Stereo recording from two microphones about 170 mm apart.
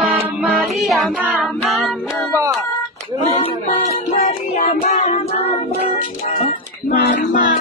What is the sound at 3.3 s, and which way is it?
Child singing, 40° left (ahead or behind).